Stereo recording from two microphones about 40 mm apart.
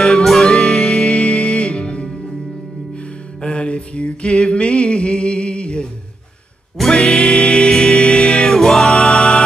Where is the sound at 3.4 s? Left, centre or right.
Left.